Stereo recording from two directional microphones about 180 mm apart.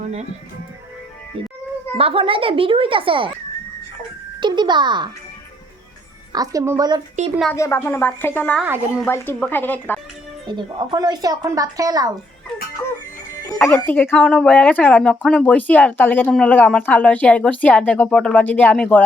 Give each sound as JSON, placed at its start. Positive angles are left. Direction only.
{"t": 1.4, "sound": "a woman's voice", "side_deg": -30}
{"t": 4.4, "sound": "a woman's voice", "side_deg": -25}
{"t": 6.3, "sound": "a woman's voice", "side_deg": -20}
{"t": 7.5, "sound": "a woman's voice", "side_deg": 15}
{"t": 8.6, "sound": "a woman's voice", "side_deg": -10}
{"t": 9.0, "sound": "a woman's voice", "side_deg": 10}
{"t": 10.4, "sound": "a woman's voice", "side_deg": -25}
{"t": 13.5, "sound": "a woman's voice", "side_deg": 15}